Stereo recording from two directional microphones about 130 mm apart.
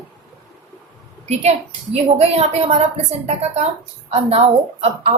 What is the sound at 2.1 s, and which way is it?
A woman's voice, 55° right (ahead or behind).